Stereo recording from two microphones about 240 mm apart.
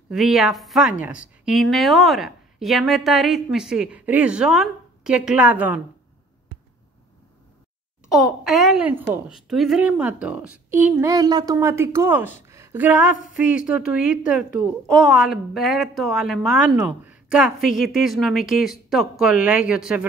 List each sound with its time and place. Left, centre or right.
0.1 s speech: centre
8.1 s a woman's voice: centre
12.4 s a sound: centre
13.3 s speech: centre